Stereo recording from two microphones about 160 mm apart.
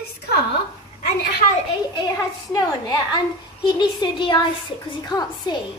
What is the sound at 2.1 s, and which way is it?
A woman's voice, 20° left (ahead or behind).